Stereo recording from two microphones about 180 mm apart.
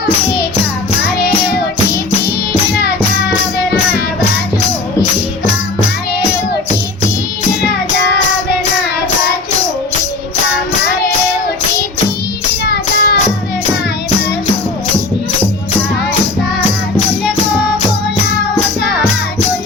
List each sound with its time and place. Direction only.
2.7 s music: 60° left (ahead or behind)
7.6 s child singing: 65° left (ahead or behind)
12.6 s music: 60° left (ahead or behind)